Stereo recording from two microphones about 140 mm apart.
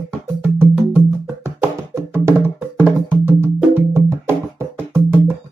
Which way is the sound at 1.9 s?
20° right (ahead or behind).